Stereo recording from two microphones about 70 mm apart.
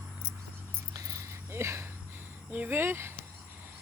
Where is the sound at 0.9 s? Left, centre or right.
Right.